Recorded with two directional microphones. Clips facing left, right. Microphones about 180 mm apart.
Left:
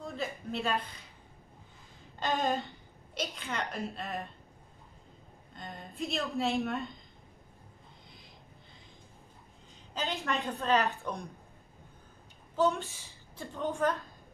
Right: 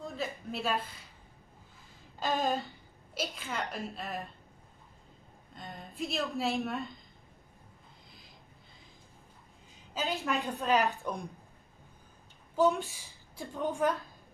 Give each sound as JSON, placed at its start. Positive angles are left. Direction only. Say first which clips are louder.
{"t": 0.0, "sound": "a sound", "louder": "even", "side_deg": 0}
{"t": 0.5, "sound": "a woman's voice", "louder": "left 1 dB", "side_deg": 0}
{"t": 2.1, "sound": "a woman's voice", "louder": "even", "side_deg": 0}
{"t": 5.5, "sound": "a woman's voice", "louder": "left 1 dB", "side_deg": 0}
{"t": 9.9, "sound": "a woman's voice", "louder": "right 1 dB", "side_deg": 0}
{"t": 10.4, "sound": "a woman's voice", "louder": "even", "side_deg": -15}
{"t": 12.5, "sound": "a woman's voice", "louder": "right 2 dB", "side_deg": -15}